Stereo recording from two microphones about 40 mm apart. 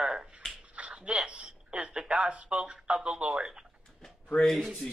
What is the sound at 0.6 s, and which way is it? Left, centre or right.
Speech, right.